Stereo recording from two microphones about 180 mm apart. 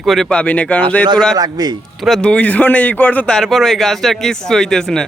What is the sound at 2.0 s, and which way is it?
Speech, centre (ahead or behind).